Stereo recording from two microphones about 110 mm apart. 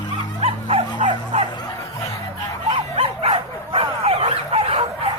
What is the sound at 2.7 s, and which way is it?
Dog, 55° right (ahead or behind).